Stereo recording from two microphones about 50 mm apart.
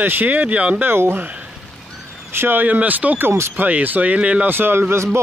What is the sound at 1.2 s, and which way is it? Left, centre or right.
Speech, right.